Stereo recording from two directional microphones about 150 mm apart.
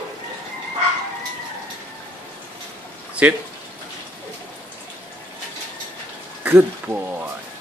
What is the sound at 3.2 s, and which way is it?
Speech, 10° right (ahead or behind).